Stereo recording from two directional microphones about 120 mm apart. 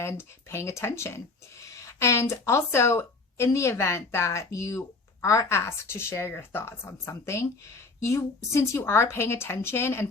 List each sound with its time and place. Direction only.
0.0 s speech: 20° left (ahead or behind)